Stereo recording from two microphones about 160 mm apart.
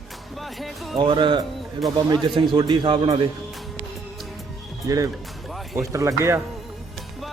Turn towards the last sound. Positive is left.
turn(degrees=-20)  # may be behind; listen again after turning